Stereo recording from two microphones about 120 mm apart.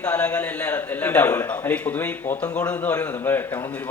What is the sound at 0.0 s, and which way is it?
A man's voice, 10° left (ahead or behind).